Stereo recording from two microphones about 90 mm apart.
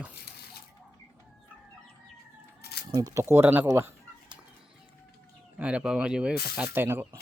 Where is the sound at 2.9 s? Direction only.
45° right (ahead or behind).